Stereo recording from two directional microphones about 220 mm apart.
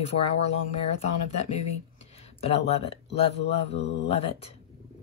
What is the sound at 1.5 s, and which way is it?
Speech, 30° left (ahead or behind).